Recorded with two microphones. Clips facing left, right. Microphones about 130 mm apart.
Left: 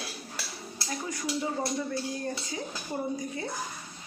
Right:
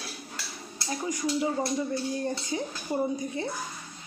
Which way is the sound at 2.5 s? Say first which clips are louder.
Right 5 dB; 30° right (ahead or behind).